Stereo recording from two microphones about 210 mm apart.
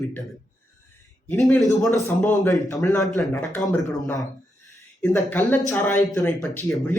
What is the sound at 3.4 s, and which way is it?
A man's voice, centre (ahead or behind).